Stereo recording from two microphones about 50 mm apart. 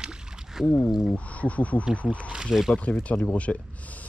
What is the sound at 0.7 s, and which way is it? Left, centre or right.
Speech, left.